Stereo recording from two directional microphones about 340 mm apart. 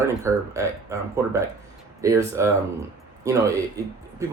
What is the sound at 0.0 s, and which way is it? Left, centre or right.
Speech, centre.